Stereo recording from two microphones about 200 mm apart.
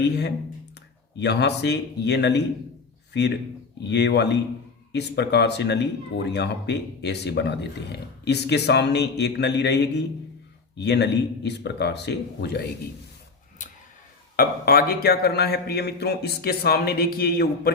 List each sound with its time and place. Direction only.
1.2 s a man's voice: 60° left (ahead or behind)
13.6 s tick-tock: 40° left (ahead or behind)
14.3 s a man's voice: 45° left (ahead or behind)